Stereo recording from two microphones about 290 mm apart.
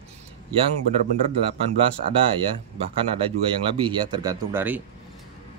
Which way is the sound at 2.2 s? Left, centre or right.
Centre.